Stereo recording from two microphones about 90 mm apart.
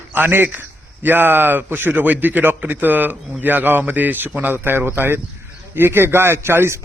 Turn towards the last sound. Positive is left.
turn(degrees=-30)  # may be behind; listen again after turning